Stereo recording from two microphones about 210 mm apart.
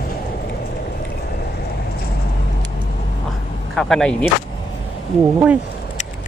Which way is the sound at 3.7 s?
Centre (ahead or behind).